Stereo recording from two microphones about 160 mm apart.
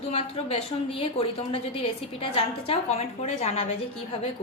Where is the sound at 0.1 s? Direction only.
40° left (ahead or behind).